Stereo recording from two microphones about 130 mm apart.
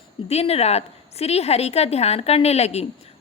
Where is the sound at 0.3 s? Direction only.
50° left (ahead or behind).